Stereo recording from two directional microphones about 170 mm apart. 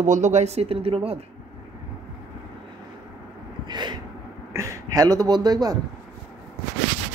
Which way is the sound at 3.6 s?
25° right (ahead or behind).